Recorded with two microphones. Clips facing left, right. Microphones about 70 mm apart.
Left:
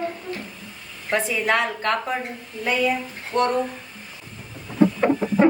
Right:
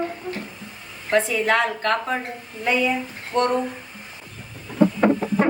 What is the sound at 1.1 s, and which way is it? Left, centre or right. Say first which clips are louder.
Speech: right 2 dB; centre.